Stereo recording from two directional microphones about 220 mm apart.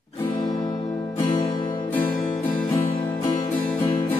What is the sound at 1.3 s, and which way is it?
Music, 25° left (ahead or behind).